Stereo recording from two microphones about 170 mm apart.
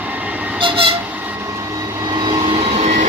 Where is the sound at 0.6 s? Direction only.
30° right (ahead or behind).